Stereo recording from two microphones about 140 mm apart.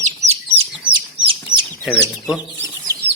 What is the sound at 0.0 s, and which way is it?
Chicken, 55° right (ahead or behind).